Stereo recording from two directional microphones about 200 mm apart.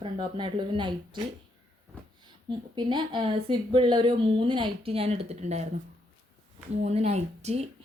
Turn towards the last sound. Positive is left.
turn(degrees=-30)  # may be behind; listen again after turning